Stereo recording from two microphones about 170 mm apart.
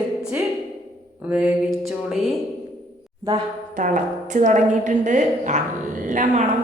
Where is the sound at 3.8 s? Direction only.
50° right (ahead or behind).